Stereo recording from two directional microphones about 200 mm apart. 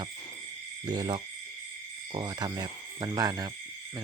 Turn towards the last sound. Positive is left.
turn(degrees=-15)  # may be behind; listen again after turning